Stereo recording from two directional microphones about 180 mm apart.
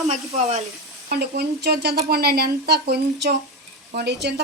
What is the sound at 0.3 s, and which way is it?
Speech, 40° right (ahead or behind).